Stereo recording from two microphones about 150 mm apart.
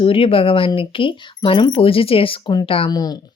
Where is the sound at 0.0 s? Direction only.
35° left (ahead or behind).